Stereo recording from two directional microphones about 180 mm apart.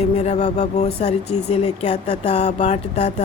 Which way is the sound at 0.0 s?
40° left (ahead or behind).